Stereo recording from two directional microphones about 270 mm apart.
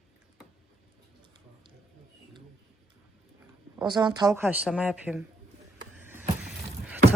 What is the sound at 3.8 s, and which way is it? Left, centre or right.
Speech, centre.